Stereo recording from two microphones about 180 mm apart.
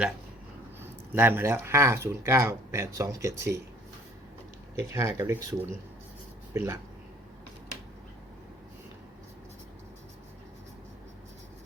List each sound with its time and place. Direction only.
0.8 s speech: 10° right (ahead or behind)
4.9 s speech: 15° right (ahead or behind)